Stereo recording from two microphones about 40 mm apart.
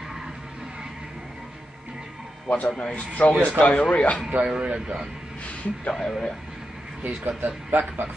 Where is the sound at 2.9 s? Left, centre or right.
Left.